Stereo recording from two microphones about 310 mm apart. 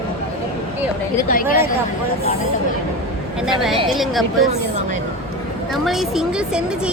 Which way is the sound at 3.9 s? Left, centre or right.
Centre.